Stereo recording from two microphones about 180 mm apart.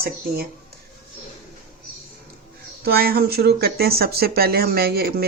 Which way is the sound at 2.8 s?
60° right (ahead or behind).